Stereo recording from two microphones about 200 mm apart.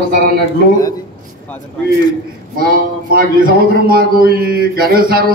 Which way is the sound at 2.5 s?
45° right (ahead or behind).